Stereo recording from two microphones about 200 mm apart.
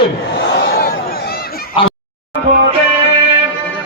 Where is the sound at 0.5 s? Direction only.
55° left (ahead or behind).